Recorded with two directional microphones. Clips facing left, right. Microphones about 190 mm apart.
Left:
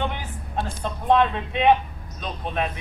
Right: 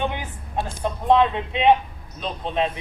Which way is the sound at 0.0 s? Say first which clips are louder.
Right 2 dB; 15° right (ahead or behind).